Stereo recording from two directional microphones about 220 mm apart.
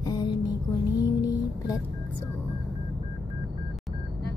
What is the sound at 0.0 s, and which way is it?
Music, 20° left (ahead or behind).